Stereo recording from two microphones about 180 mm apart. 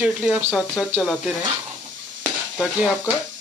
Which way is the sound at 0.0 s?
5° right (ahead or behind).